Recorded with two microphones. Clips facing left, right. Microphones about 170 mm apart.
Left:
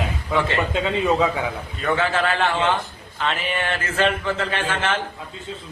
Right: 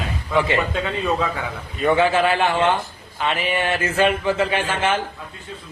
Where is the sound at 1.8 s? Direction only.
15° right (ahead or behind).